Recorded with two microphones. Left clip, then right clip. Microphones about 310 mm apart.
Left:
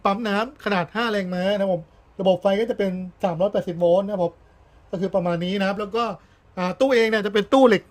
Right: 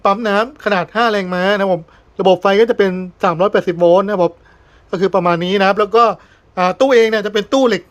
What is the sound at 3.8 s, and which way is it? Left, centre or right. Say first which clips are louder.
Speech: right 7 dB; right.